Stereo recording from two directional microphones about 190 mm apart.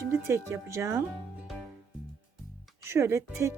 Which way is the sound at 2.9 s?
15° right (ahead or behind).